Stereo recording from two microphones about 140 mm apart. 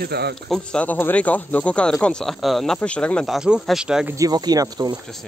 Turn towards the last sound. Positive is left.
turn(degrees=-30)  # may be behind; listen again after turning